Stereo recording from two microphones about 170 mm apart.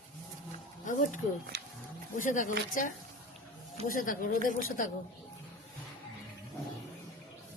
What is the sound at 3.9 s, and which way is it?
Speech, 50° left (ahead or behind).